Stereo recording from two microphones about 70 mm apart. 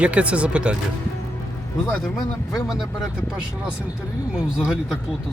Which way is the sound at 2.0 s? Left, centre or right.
Centre.